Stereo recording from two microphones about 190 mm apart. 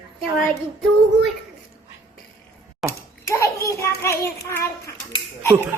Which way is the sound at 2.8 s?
Centre (ahead or behind).